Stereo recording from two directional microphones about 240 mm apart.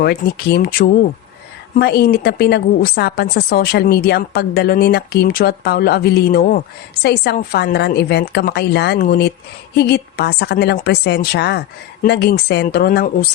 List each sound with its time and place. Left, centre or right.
0.0 s a woman's voice: left